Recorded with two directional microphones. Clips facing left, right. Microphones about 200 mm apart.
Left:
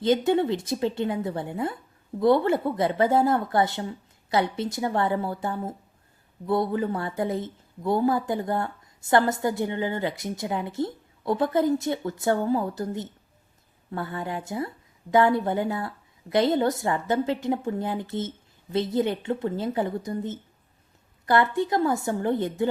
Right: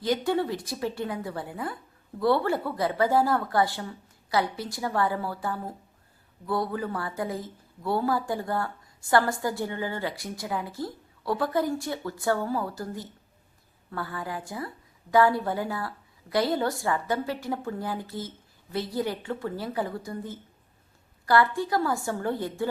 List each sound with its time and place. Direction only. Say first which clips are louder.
0.0 s a woman's voice: left 4 dB; 20° left (ahead or behind)